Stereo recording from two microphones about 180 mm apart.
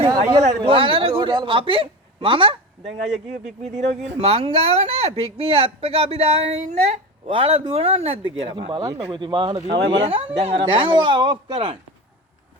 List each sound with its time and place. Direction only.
0.1 s speech: 20° right (ahead or behind)